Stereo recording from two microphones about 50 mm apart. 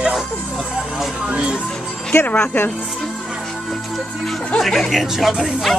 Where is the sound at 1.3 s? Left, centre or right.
Right.